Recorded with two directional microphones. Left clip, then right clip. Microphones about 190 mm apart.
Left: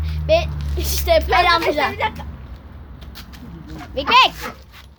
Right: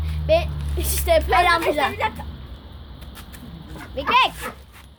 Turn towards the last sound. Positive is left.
turn(degrees=25)  # may be behind; listen again after turning